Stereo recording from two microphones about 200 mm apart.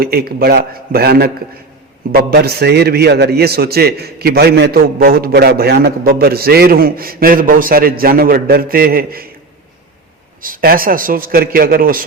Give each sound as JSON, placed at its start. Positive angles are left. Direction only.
{"t": 0.0, "sound": "a man's voice", "side_deg": -50}
{"t": 10.4, "sound": "a man's voice", "side_deg": -45}